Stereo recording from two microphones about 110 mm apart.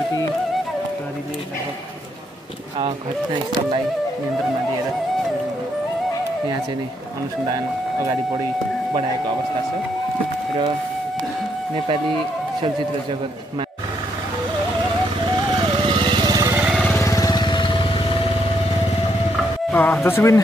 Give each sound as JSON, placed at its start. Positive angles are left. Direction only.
{"t": 7.4, "sound": "speech", "side_deg": -35}
{"t": 15.3, "sound": "vehicle", "side_deg": -45}
{"t": 17.0, "sound": "vehicle", "side_deg": 30}
{"t": 19.7, "sound": "speech", "side_deg": 20}